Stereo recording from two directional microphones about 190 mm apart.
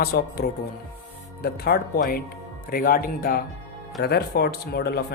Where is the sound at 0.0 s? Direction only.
55° left (ahead or behind).